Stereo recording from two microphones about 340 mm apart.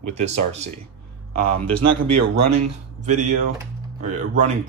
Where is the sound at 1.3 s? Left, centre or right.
Right.